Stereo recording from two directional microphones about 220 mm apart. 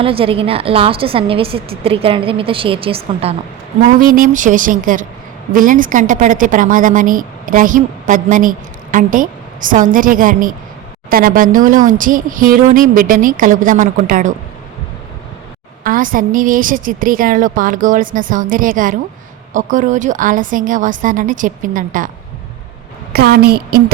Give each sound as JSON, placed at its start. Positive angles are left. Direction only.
{"t": 0.0, "sound": "a woman's voice", "side_deg": -25}
{"t": 4.0, "sound": "a woman's voice", "side_deg": -40}
{"t": 15.8, "sound": "a woman's voice", "side_deg": -40}
{"t": 23.1, "sound": "a woman's voice", "side_deg": -45}